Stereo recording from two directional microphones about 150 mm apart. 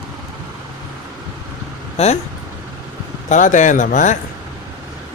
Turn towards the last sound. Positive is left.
turn(degrees=55)  # may be behind; listen again after turning